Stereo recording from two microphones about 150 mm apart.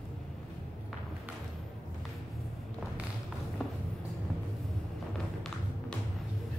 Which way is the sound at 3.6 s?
Centre (ahead or behind).